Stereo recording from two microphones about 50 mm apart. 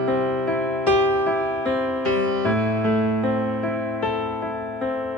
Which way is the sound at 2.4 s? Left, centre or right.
Left.